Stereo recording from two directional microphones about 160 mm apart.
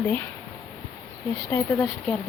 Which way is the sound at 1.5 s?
5° left (ahead or behind).